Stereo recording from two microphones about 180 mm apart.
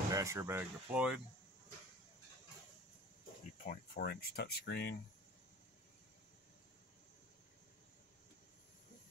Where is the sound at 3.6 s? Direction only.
50° left (ahead or behind); by 4.9 s 65° left (ahead or behind).